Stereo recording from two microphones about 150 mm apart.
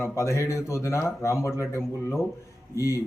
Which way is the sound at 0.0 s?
20° left (ahead or behind).